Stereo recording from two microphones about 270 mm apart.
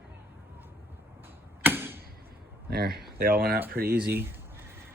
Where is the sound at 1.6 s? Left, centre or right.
Centre.